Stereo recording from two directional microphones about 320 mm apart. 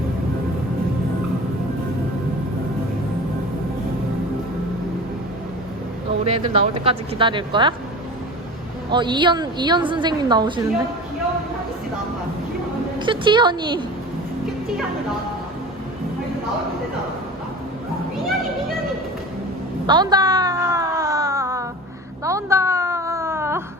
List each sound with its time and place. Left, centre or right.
6.2 s a woman's voice: centre
8.9 s a woman's voice: centre
13.0 s a woman's voice: centre
19.9 s a sound: centre